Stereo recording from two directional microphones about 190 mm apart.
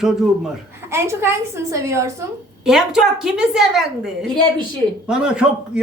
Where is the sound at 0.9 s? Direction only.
15° right (ahead or behind).